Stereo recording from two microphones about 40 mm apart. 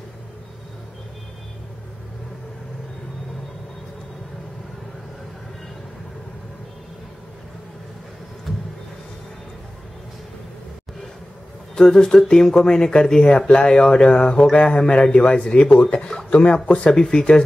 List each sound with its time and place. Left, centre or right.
8.5 s vehicle: centre
11.9 s speech: centre
16.3 s speech: left
16.9 s speech: centre